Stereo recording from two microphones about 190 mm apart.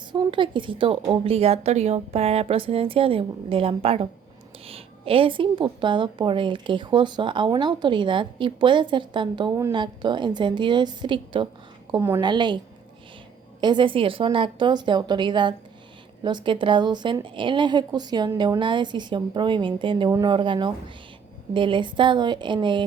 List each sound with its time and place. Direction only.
0.1 s speech: 25° right (ahead or behind)
11.9 s a woman's voice: 15° right (ahead or behind)
13.6 s speech: 25° right (ahead or behind)